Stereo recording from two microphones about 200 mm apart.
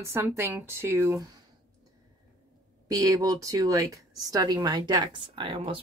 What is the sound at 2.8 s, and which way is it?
Speech, 15° right (ahead or behind).